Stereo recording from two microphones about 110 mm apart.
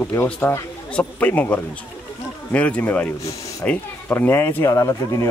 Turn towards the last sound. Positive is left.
turn(degrees=30)  # may be behind; listen again after turning